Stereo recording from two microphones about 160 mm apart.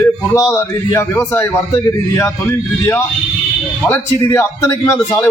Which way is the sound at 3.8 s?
15° left (ahead or behind).